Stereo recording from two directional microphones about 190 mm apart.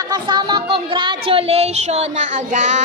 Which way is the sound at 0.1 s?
20° right (ahead or behind).